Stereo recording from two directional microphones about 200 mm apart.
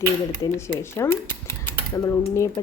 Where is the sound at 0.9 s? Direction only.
15° left (ahead or behind).